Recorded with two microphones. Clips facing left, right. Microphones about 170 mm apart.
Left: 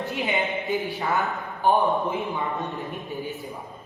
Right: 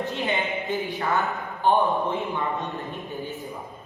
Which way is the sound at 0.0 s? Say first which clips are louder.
Even; 10° left (ahead or behind).